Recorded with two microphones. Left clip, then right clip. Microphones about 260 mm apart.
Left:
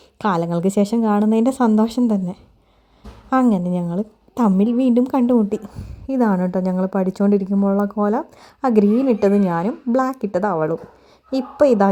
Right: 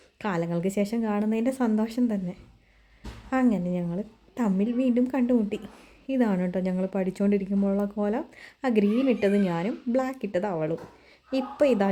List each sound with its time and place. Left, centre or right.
0.2 s a woman's voice: left